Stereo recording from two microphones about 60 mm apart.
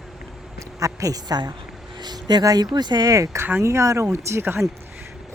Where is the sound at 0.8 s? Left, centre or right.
Right.